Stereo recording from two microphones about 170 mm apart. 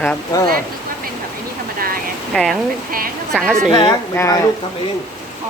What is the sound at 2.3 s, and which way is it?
A woman's voice, centre (ahead or behind).